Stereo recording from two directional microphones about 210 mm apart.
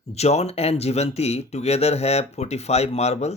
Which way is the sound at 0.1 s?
30° left (ahead or behind).